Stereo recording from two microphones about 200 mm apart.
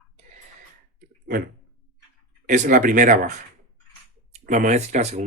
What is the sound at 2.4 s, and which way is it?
Speech, 40° right (ahead or behind).